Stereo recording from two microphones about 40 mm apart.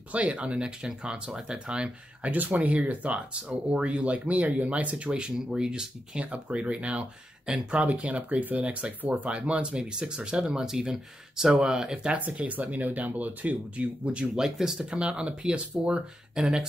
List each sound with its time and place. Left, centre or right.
0.1 s speech: right
2.3 s speech: right
9.3 s speech: right
12.1 s speech: right
14.3 s speech: centre
14.8 s speech: right